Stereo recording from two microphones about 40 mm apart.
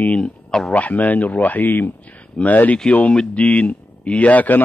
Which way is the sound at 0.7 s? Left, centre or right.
Left.